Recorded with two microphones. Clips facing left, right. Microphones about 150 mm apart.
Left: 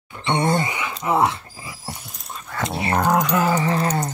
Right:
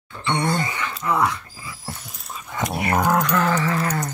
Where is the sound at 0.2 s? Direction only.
25° left (ahead or behind).